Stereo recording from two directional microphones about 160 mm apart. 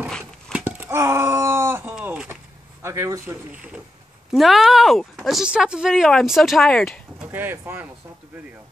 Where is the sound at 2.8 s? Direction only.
20° right (ahead or behind).